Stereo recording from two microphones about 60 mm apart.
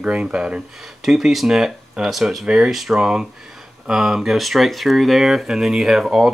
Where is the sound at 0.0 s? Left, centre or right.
Centre.